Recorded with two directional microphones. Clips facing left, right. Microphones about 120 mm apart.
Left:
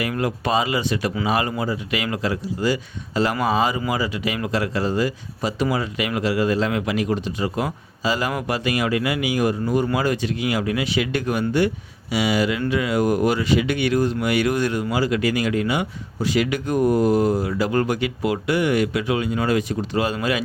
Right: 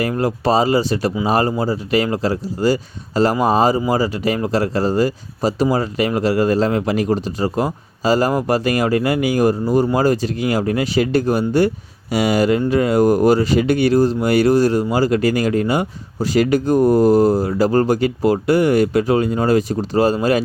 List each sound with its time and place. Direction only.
0.0 s speech: 35° right (ahead or behind)